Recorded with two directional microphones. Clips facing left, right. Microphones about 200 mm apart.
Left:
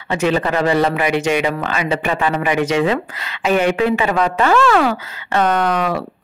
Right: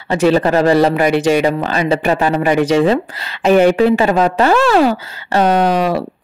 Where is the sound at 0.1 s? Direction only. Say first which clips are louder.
Right 5 dB; 35° right (ahead or behind).